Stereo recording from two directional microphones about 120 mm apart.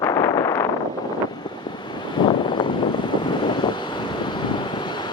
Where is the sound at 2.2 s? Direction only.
40° left (ahead or behind).